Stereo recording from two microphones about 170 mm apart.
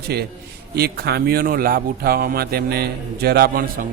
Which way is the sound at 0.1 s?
70° right (ahead or behind).